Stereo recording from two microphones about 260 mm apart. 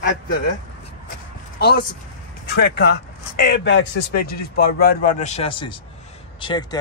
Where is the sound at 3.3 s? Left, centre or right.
Left; by 6.8 s centre.